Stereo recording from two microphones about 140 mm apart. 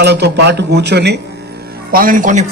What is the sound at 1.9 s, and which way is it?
Speech, 90° right.